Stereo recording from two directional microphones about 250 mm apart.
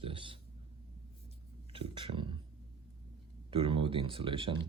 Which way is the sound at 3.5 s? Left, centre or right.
Right.